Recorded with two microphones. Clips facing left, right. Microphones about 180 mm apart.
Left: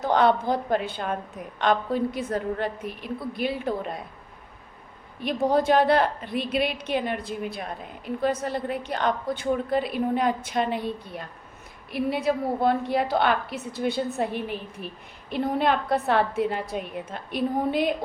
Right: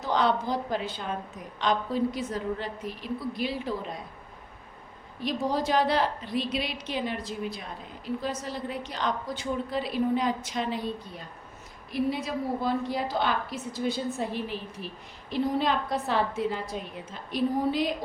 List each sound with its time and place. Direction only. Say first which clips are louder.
0.0 s a woman's voice: left 5 dB; 55° left (ahead or behind)
5.2 s a woman's voice: left 5 dB; 55° left (ahead or behind)